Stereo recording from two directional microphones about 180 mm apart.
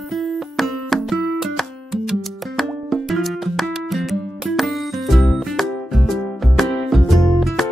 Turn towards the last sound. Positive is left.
turn(degrees=0)  # may be behind; listen again after turning